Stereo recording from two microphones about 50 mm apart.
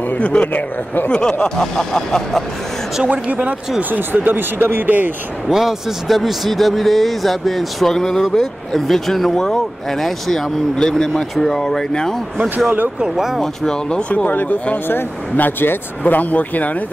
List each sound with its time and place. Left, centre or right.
0.1 s speech: left
1.1 s speech: centre
3.1 s speech: right
5.5 s a man's voice: centre
13.0 s speech: centre
13.4 s speech: centre; by 16.7 s left